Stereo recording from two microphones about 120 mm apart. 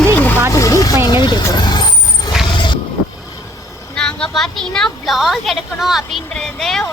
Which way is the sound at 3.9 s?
5° left (ahead or behind).